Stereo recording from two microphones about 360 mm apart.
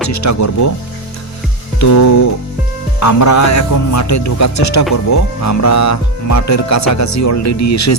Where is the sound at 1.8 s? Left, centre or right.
Left.